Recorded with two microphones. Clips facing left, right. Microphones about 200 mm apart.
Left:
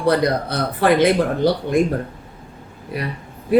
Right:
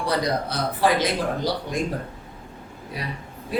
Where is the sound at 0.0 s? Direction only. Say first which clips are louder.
Left 6 dB; 60° left (ahead or behind).